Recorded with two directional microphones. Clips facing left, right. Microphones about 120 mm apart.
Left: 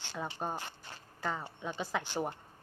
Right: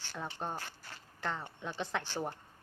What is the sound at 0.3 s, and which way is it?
Speech, 10° left (ahead or behind).